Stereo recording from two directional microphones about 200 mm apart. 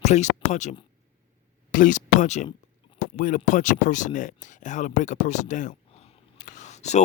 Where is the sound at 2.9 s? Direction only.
40° left (ahead or behind).